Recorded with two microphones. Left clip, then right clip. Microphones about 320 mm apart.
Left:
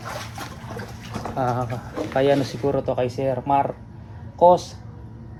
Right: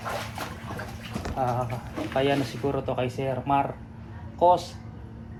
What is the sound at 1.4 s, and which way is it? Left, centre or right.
A man's voice, left.